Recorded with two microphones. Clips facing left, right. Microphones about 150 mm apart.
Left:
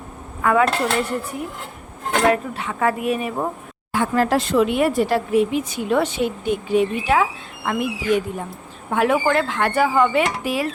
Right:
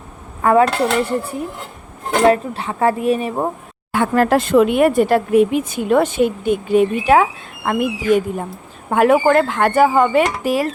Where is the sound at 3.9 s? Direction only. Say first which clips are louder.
Right 4 dB; 55° right (ahead or behind).